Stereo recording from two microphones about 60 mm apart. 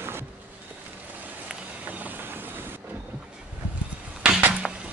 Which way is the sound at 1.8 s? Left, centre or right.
Right.